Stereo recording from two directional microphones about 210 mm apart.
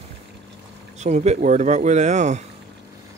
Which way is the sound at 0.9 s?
30° right (ahead or behind).